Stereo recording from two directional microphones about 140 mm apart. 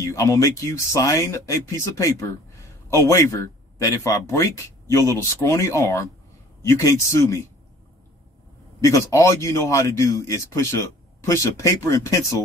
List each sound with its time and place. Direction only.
0.1 s a man's voice: 25° left (ahead or behind)
8.8 s a man's voice: 20° left (ahead or behind)